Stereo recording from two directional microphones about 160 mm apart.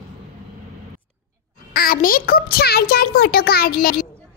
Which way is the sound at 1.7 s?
65° left (ahead or behind).